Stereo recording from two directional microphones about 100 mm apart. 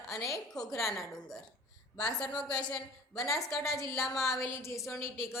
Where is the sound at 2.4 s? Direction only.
45° left (ahead or behind).